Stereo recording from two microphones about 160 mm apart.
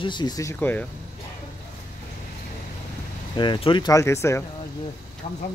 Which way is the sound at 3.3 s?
30° left (ahead or behind).